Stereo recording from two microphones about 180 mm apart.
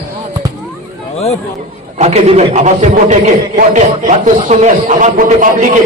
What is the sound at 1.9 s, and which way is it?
A man's voice, 35° right (ahead or behind).